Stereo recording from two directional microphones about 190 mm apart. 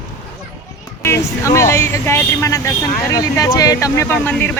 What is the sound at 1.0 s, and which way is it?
Speech, 15° left (ahead or behind).